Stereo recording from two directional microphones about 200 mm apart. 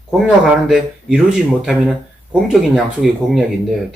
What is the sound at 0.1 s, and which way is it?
Speech, 5° right (ahead or behind).